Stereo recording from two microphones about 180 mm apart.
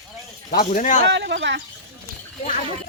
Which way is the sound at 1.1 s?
80° right.